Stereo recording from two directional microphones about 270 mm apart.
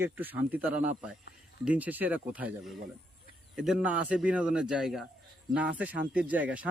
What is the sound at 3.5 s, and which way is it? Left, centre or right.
Speech, centre.